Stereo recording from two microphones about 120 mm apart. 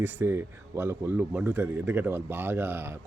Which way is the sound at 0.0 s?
20° right (ahead or behind).